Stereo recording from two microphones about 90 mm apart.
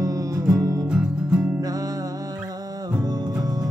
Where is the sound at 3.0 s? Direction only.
45° right (ahead or behind).